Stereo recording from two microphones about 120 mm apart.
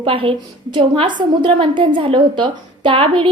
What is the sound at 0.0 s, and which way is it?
A woman's voice, 50° right (ahead or behind).